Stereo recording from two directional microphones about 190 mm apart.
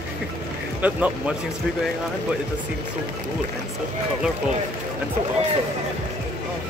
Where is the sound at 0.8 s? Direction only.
10° right (ahead or behind).